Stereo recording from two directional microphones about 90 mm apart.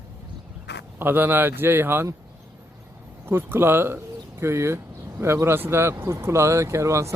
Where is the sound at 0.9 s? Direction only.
20° right (ahead or behind).